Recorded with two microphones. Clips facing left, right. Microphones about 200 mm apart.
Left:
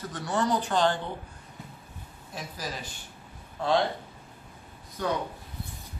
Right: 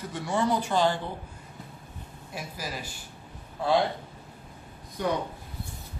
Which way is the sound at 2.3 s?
10° right (ahead or behind).